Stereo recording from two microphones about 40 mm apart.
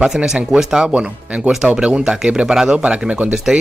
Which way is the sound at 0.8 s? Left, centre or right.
Right.